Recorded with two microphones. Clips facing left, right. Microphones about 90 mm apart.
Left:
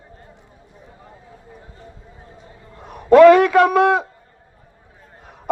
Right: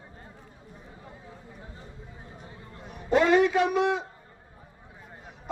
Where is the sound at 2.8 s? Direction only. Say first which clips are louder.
Left 15 dB; 60° left (ahead or behind).